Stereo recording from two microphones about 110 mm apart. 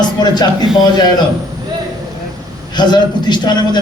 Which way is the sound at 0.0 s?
40° left (ahead or behind).